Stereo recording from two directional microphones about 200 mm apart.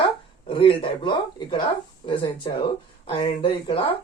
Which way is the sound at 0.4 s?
25° left (ahead or behind).